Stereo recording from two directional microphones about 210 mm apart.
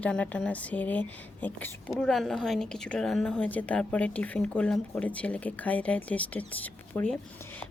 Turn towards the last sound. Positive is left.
turn(degrees=5)  # may be behind; listen again after turning